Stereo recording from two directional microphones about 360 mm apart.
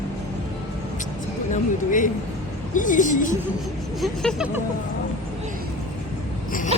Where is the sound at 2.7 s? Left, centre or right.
Left.